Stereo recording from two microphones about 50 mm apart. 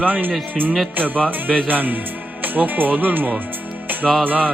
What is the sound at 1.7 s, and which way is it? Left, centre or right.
Speech, right.